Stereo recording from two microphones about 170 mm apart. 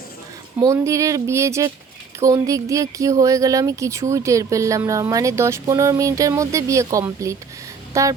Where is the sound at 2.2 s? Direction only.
20° right (ahead or behind).